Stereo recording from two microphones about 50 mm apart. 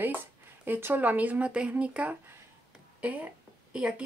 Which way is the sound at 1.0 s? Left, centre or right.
Right.